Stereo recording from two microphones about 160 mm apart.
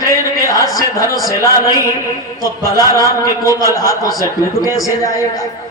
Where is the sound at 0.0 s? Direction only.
20° left (ahead or behind).